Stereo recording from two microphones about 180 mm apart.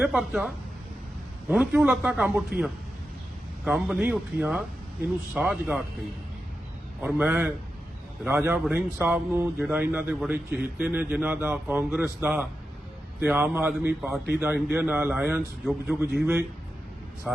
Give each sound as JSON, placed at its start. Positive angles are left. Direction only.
{"t": 0.0, "sound": "a man's voice", "side_deg": -5}
{"t": 3.6, "sound": "a man's voice", "side_deg": -5}
{"t": 7.0, "sound": "a man's voice", "side_deg": -10}